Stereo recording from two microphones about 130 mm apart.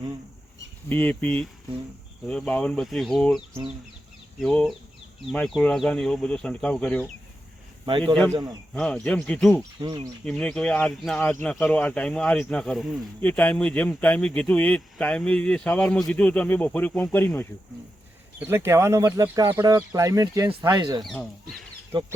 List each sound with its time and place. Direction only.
0.9 s speech: 10° left (ahead or behind)
7.9 s speech: 40° right (ahead or behind)
8.7 s speech: 5° left (ahead or behind)
9.8 s speech: 30° right (ahead or behind)
10.2 s speech: 5° left (ahead or behind)
18.3 s speech: 20° right (ahead or behind); by 22.1 s 35° right (ahead or behind)